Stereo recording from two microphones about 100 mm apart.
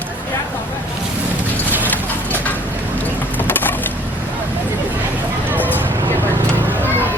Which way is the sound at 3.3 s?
20° left (ahead or behind).